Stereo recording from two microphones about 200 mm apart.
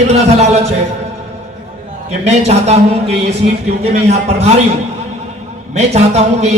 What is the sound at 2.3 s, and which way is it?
A man's voice, 35° right (ahead or behind).